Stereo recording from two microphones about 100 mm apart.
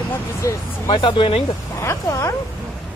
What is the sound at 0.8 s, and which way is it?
Speech, 60° left (ahead or behind).